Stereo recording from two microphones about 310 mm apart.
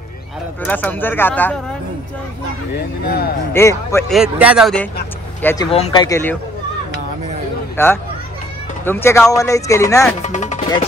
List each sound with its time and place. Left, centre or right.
0.7 s speech: centre
2.7 s speech: left
3.5 s speech: centre
4.2 s speech: centre
7.7 s speech: centre
10.2 s music: left